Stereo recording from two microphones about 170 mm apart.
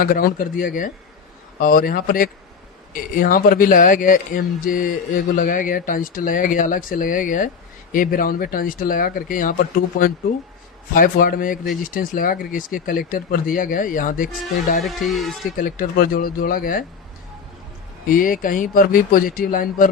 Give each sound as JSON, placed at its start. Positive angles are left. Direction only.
{"t": 0.0, "sound": "speech", "side_deg": 55}
{"t": 15.1, "sound": "speech", "side_deg": 0}
{"t": 15.5, "sound": "speech", "side_deg": 55}
{"t": 18.1, "sound": "speech", "side_deg": 55}